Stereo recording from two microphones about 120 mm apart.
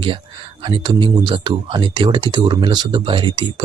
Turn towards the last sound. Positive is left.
turn(degrees=-40)  # may be behind; listen again after turning